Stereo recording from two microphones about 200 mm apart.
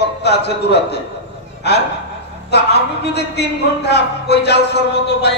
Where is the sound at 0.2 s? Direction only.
55° left (ahead or behind).